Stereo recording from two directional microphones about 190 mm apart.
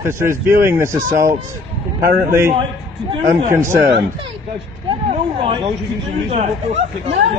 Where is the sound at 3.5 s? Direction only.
15° right (ahead or behind).